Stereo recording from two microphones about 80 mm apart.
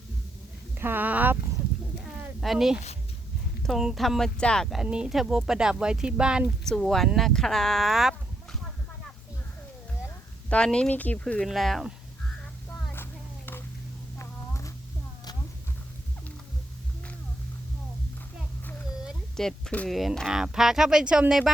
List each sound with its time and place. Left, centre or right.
0.8 s speech: right
2.4 s speech: centre
3.8 s speech: centre
4.7 s speech: centre
6.7 s speech: centre
10.5 s speech: centre
11.4 s speech: centre
12.9 s a sound: left
14.2 s a sound: left
19.4 s a sound: centre
19.9 s speech: centre